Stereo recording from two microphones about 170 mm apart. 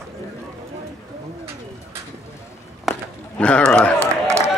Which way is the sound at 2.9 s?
5° left (ahead or behind).